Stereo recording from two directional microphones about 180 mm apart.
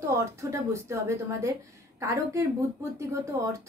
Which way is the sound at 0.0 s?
15° right (ahead or behind).